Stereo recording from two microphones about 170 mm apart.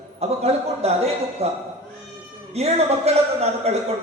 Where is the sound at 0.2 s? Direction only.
35° right (ahead or behind).